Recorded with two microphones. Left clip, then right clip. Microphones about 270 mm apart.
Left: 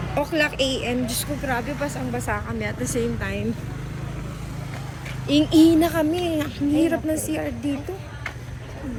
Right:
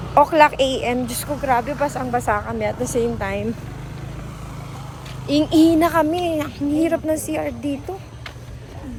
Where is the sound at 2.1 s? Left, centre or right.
Right.